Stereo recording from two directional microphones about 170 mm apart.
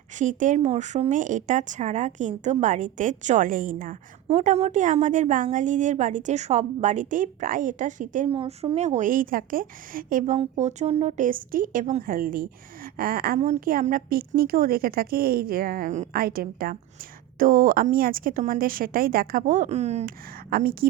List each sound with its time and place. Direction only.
0.2 s a woman's voice: 50° right (ahead or behind)
4.3 s a woman's voice: 40° right (ahead or behind)
8.3 s a woman's voice: 30° right (ahead or behind); by 10.3 s 55° right (ahead or behind)
10.3 s speech: 40° right (ahead or behind)
16.1 s speech: 60° right (ahead or behind); by 20.1 s 40° right (ahead or behind)
20.5 s speech: 60° right (ahead or behind)